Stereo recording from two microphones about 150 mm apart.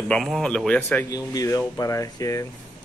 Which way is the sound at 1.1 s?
25° left (ahead or behind).